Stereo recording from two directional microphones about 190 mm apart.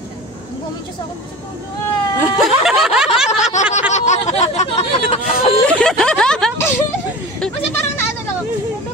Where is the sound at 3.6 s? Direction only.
40° left (ahead or behind).